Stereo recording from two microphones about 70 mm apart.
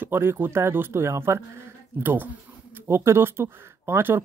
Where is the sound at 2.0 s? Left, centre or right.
Right.